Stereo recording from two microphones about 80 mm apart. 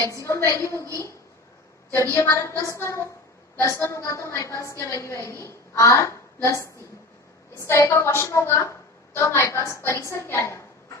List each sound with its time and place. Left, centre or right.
0.0 s a woman's voice: left
2.0 s a woman's voice: left